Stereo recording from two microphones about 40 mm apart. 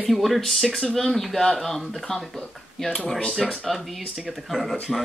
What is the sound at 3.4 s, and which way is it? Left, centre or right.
Speech, centre.